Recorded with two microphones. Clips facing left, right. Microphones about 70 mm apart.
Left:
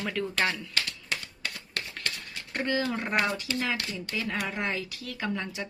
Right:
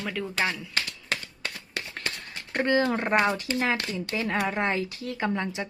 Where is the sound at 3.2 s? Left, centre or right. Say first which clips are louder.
Right 4 dB; right.